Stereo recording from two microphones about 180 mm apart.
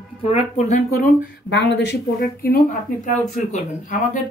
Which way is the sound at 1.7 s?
70° left (ahead or behind).